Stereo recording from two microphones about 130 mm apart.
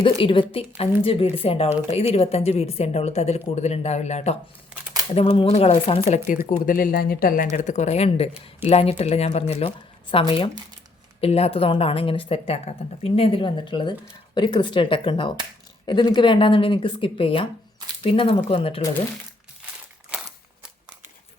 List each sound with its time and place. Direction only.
0.0 s speech: 40° left (ahead or behind); by 4.4 s 60° left (ahead or behind)
5.1 s speech: 45° left (ahead or behind)
6.1 s speech: 70° left (ahead or behind)
6.7 s speech: 90° left
7.5 s speech: 65° left (ahead or behind); by 18.8 s 45° left (ahead or behind)
20.1 s a sound: 5° right (ahead or behind)